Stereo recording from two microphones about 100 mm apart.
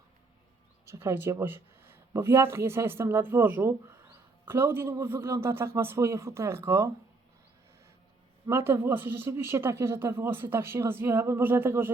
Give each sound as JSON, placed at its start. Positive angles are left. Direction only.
{"t": 0.9, "sound": "speech", "side_deg": -25}
{"t": 8.4, "sound": "speech", "side_deg": -25}